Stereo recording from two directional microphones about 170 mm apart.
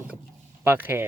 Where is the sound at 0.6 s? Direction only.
10° right (ahead or behind).